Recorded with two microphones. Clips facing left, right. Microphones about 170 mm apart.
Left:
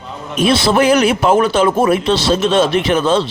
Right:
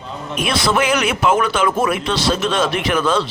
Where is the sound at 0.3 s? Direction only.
30° left (ahead or behind).